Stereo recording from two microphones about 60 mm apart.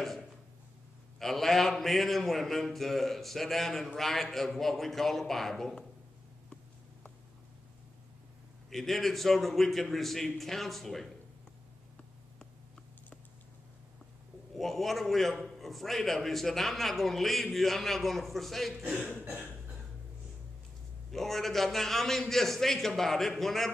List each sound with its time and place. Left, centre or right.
1.2 s a man's voice: centre
8.6 s a man's voice: centre
14.6 s a man's voice: centre
19.0 s cough: centre
21.1 s a man's voice: centre